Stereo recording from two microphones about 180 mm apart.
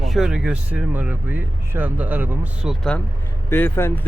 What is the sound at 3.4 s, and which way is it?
Speech, 10° left (ahead or behind).